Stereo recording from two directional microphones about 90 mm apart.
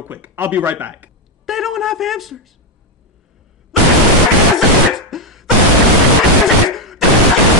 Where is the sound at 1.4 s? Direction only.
Centre (ahead or behind).